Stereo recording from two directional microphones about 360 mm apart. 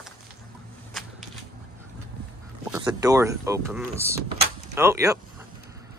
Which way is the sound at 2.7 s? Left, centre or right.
Centre.